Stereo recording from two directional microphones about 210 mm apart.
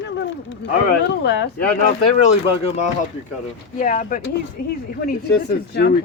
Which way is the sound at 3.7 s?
35° left (ahead or behind).